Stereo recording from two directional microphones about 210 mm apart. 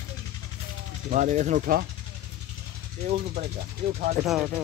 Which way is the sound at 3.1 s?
35° right (ahead or behind).